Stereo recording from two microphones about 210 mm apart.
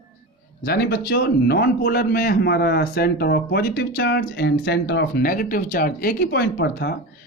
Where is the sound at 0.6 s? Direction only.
50° left (ahead or behind).